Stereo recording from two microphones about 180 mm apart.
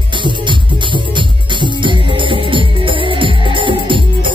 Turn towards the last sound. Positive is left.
turn(degrees=-25)  # may be behind; listen again after turning